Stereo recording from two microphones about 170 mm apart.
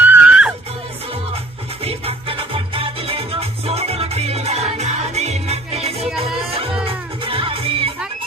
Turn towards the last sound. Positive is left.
turn(degrees=-35)  # may be behind; listen again after turning